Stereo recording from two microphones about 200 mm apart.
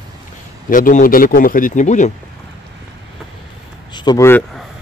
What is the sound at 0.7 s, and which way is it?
Speech, 40° left (ahead or behind).